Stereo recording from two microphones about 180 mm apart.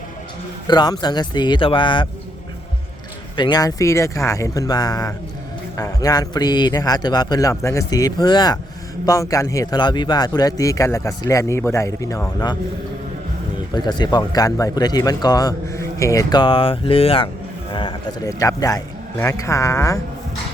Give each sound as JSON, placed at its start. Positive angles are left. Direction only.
{"t": 0.7, "sound": "speech", "side_deg": 25}
{"t": 3.3, "sound": "a man's voice", "side_deg": 25}
{"t": 13.7, "sound": "a man's voice", "side_deg": 25}